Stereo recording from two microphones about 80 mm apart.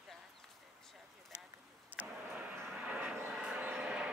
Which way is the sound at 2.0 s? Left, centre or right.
Right.